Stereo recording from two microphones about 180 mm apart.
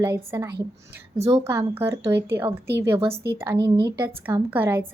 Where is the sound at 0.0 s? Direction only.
15° right (ahead or behind).